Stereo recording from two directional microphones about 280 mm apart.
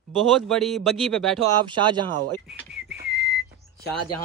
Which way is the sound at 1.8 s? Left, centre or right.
Centre.